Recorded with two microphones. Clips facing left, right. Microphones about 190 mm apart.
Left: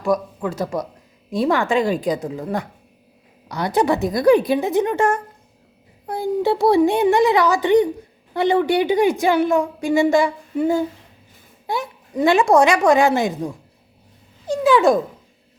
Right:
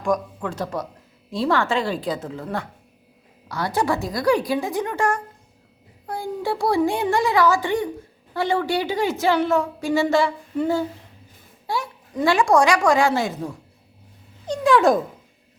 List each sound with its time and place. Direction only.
0.0 s a woman's voice: 5° left (ahead or behind)
14.4 s dog: 5° left (ahead or behind)